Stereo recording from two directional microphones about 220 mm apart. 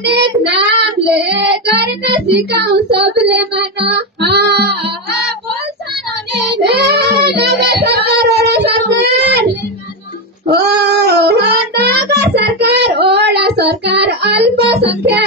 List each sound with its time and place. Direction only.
0.1 s child singing: 50° right (ahead or behind)
6.6 s child singing: 50° right (ahead or behind)
10.5 s music: 50° right (ahead or behind)